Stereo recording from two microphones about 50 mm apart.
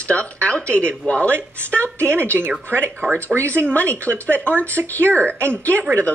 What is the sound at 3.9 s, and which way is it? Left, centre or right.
Speech, right.